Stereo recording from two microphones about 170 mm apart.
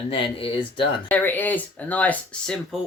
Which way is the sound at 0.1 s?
30° left (ahead or behind).